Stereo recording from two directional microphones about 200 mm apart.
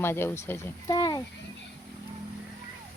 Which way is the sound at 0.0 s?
10° left (ahead or behind).